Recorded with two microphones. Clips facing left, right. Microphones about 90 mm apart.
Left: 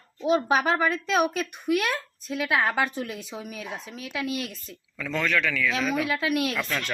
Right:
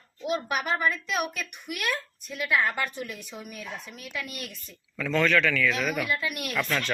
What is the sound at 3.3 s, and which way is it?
Speech, 45° left (ahead or behind).